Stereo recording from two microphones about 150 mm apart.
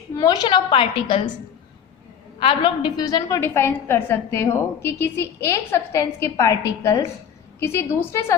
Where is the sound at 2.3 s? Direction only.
35° left (ahead or behind).